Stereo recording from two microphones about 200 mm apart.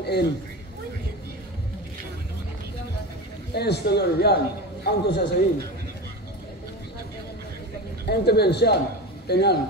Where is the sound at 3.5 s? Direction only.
55° left (ahead or behind).